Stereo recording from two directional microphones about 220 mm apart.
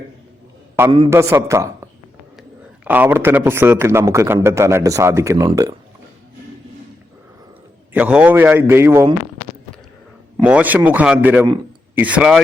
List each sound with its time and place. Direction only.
0.9 s a man's voice: 25° right (ahead or behind)
1.1 s a man's voice: 15° right (ahead or behind)
2.8 s a man's voice: 5° right (ahead or behind)
7.9 s a man's voice: 5° right (ahead or behind)
10.3 s a man's voice: 5° right (ahead or behind)